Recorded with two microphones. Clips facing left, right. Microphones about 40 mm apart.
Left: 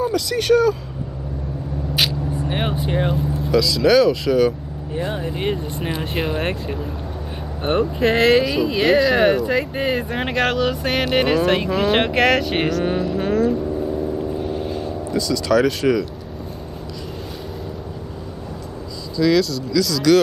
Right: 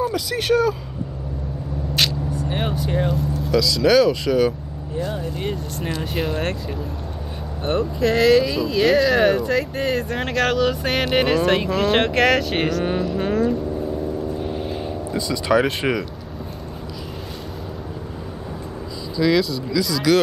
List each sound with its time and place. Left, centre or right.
0.1 s speech: centre
2.3 s vehicle: left
3.5 s speech: centre
4.9 s speech: left; by 6.5 s centre
7.6 s speech: left; by 13.6 s centre
14.4 s vehicle: centre
15.0 s speech: right
19.1 s speech: centre